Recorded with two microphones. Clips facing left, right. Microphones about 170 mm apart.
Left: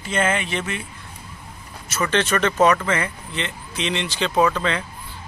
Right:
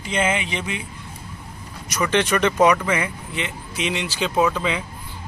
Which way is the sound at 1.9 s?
15° right (ahead or behind).